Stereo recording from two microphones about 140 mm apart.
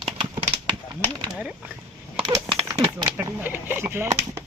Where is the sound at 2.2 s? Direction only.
30° right (ahead or behind).